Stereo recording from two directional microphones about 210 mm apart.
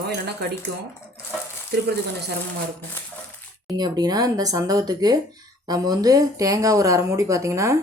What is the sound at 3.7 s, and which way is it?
Speech, 20° right (ahead or behind).